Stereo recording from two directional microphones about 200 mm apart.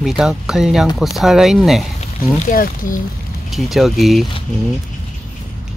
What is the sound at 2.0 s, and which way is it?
Speech, 40° left (ahead or behind).